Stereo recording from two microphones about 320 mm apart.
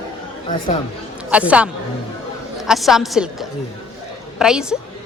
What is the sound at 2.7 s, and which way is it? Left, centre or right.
A woman's voice, centre.